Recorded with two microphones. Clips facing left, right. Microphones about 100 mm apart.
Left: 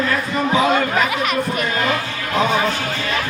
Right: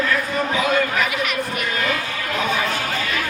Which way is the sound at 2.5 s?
35° left (ahead or behind).